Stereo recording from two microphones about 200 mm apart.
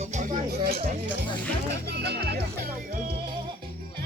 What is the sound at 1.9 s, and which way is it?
Music, 55° right (ahead or behind).